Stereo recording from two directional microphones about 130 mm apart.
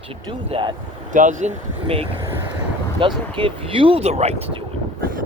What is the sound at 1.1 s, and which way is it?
Speech, 75° right (ahead or behind).